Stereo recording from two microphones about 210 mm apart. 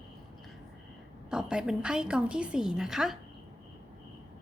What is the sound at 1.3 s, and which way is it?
Speech, 5° right (ahead or behind).